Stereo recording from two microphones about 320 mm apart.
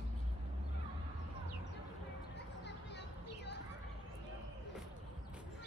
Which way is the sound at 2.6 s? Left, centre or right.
Left.